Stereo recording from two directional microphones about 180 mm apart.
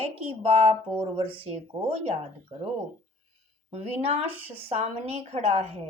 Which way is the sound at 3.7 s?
35° right (ahead or behind).